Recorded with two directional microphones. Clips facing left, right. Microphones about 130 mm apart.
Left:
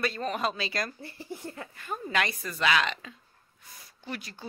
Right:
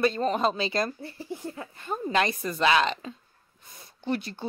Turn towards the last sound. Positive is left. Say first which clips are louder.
# right 9 dB
turn(degrees=-30)  # may be behind; listen again after turning